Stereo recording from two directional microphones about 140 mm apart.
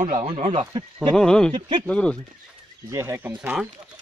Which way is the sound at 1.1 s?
5° left (ahead or behind).